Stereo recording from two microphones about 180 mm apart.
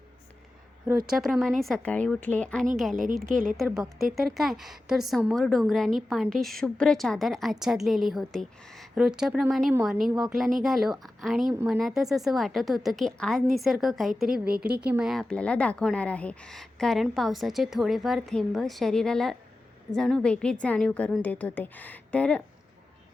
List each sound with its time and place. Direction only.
1.2 s a woman's voice: centre (ahead or behind)
2.9 s a woman's voice: 50° right (ahead or behind)
3.2 s a woman's voice: centre (ahead or behind)